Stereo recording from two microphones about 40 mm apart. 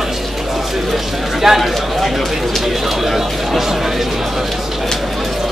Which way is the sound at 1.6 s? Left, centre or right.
Centre.